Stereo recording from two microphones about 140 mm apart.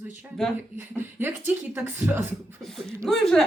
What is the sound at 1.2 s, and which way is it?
Speech, 15° right (ahead or behind).